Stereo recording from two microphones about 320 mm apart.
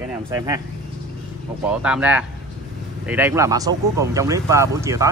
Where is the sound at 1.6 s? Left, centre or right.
Centre.